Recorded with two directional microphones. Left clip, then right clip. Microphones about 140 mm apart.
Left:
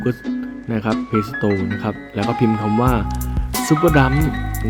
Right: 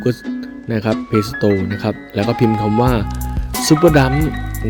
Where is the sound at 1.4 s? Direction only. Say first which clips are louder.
Right 4 dB; 30° right (ahead or behind).